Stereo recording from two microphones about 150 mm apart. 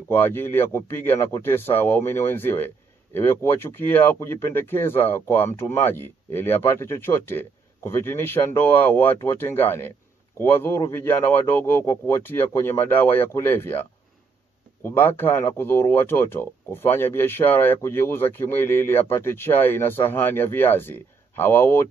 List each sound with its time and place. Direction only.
0.1 s speech: 15° left (ahead or behind)
14.8 s speech: 15° left (ahead or behind)